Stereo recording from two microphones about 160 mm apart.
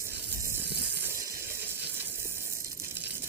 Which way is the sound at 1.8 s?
15° right (ahead or behind).